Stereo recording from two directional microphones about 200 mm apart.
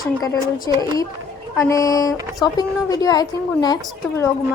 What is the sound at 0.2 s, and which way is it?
A woman's voice, 20° left (ahead or behind).